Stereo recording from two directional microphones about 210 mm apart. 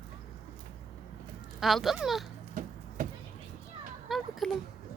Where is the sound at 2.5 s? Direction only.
40° right (ahead or behind).